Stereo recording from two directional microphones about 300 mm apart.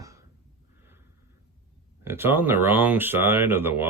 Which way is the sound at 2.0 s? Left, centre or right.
Centre.